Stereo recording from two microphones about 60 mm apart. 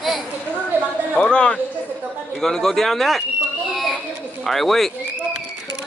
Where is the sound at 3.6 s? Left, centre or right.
Centre.